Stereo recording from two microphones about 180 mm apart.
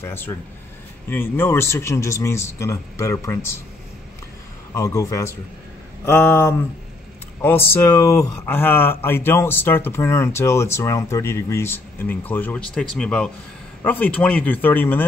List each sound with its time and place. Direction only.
0.0 s speech: 15° left (ahead or behind)
4.7 s speech: 15° left (ahead or behind)